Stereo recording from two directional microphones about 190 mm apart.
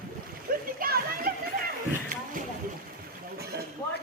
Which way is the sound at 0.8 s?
50° right (ahead or behind).